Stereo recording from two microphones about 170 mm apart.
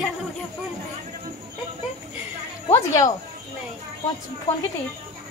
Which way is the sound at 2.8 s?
20° left (ahead or behind).